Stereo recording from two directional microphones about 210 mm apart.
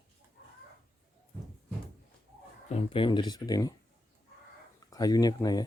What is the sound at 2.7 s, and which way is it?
Speech, 25° left (ahead or behind).